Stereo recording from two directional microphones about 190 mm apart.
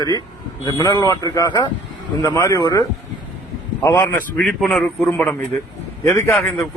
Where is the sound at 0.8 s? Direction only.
20° left (ahead or behind).